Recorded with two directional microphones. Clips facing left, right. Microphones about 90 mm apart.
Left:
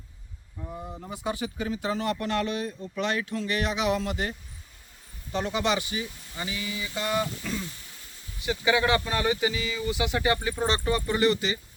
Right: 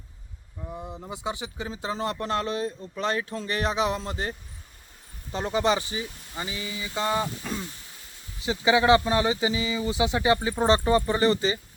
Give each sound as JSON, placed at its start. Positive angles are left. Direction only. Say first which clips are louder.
{"t": 1.1, "sound": "speech", "louder": "left 2 dB", "side_deg": -20}